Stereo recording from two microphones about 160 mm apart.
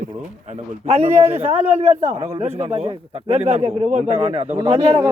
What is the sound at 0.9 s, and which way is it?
A man's voice, 40° right (ahead or behind).